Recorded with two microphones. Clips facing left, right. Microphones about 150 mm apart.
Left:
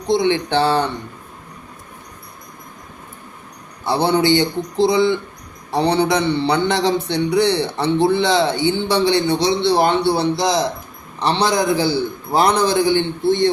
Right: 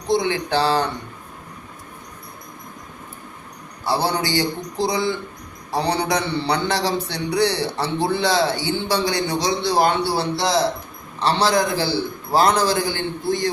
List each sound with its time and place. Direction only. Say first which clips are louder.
0.1 s a man's voice: left 3 dB; 25° left (ahead or behind)
3.8 s a man's voice: left 6 dB; 20° left (ahead or behind)